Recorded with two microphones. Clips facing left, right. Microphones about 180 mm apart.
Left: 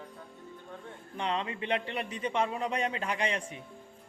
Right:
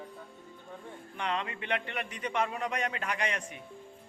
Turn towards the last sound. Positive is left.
turn(degrees=30)  # may be behind; listen again after turning